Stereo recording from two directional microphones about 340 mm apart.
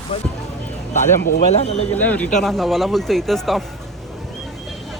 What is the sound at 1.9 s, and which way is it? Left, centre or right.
Speech, centre.